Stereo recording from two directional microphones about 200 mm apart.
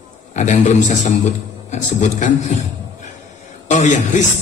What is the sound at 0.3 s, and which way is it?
A man's voice, 35° left (ahead or behind).